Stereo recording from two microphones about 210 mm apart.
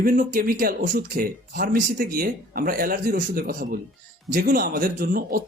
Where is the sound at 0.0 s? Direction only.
40° right (ahead or behind).